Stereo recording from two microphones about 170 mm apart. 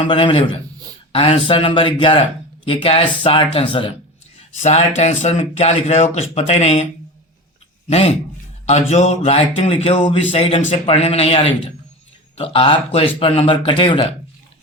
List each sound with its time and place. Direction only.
0.0 s a man's voice: 30° left (ahead or behind)
4.6 s speech: 40° left (ahead or behind)
7.9 s speech: 35° left (ahead or behind)